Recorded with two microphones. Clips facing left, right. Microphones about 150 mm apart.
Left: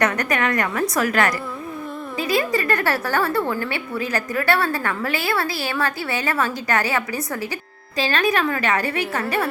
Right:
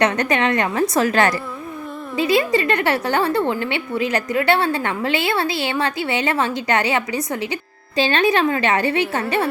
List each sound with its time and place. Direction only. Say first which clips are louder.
0.0 s a woman's voice: right 3 dB; 25° right (ahead or behind)